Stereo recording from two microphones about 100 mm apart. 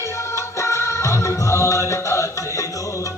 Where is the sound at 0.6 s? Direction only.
30° left (ahead or behind).